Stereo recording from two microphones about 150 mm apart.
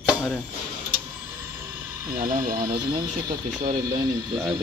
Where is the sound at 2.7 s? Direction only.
30° right (ahead or behind).